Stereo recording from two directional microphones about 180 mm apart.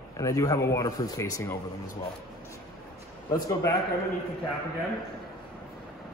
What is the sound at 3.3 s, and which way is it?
Speech, 15° left (ahead or behind).